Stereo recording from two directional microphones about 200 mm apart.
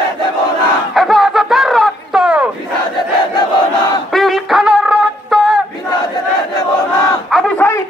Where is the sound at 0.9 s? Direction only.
Centre (ahead or behind).